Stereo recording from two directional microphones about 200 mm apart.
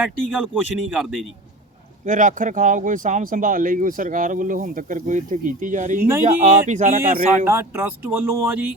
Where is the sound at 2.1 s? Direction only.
40° right (ahead or behind).